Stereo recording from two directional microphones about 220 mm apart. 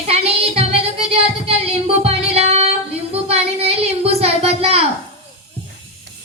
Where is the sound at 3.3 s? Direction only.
30° right (ahead or behind).